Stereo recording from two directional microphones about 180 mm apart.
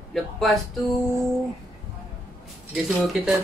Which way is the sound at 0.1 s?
Centre (ahead or behind).